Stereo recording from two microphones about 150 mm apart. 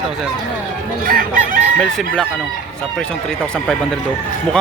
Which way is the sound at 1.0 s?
70° right (ahead or behind).